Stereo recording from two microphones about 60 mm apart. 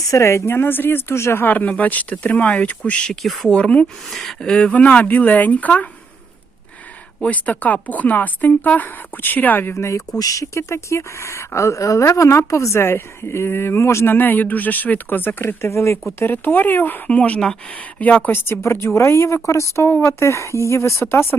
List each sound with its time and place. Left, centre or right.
0.1 s speech: left
1.5 s speech: left
3.2 s speech: centre
3.5 s speech: centre
4.1 s speech: centre
4.5 s speech: left
7.2 s speech: left
10.2 s speech: left
14.1 s speech: left
15.6 s speech: left
16.1 s speech: left
18.3 s speech: left